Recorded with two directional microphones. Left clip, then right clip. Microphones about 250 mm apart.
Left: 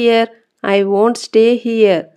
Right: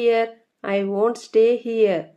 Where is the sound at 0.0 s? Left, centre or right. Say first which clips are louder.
Left 6 dB; left.